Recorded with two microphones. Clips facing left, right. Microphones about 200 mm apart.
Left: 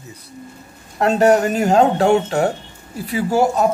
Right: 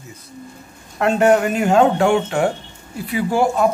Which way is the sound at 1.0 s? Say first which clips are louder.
Left 1 dB; 35° left (ahead or behind).